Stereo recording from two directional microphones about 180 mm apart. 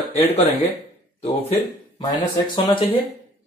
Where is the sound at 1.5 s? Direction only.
25° left (ahead or behind).